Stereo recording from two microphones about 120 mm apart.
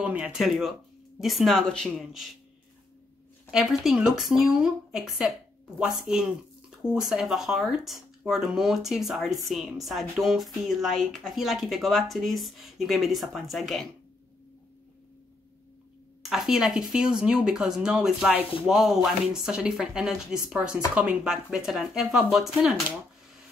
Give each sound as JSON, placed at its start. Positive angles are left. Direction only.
{"t": 0.0, "sound": "speech", "side_deg": -10}
{"t": 3.5, "sound": "speech", "side_deg": -5}
{"t": 16.2, "sound": "speech", "side_deg": 0}